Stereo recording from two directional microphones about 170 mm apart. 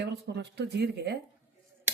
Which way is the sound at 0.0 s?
85° right.